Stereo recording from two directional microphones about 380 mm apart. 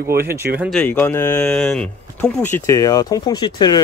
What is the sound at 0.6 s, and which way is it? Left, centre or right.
Speech, centre.